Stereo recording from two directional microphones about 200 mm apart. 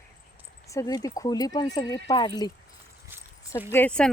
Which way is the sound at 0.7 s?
15° left (ahead or behind).